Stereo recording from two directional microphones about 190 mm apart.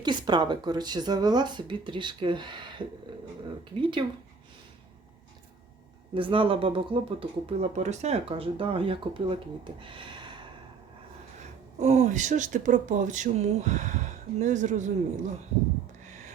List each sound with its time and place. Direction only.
0.0 s speech: 25° right (ahead or behind)
6.1 s speech: 25° right (ahead or behind)
9.8 s a sound: 25° right (ahead or behind)
11.8 s speech: 35° right (ahead or behind)